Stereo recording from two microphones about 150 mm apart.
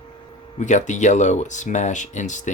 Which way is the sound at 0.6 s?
55° left (ahead or behind).